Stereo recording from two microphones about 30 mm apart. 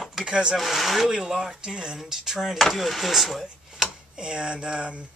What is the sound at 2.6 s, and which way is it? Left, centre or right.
Speech, centre.